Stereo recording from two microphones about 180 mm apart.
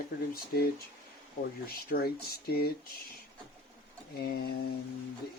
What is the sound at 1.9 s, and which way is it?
Speech, 60° left (ahead or behind).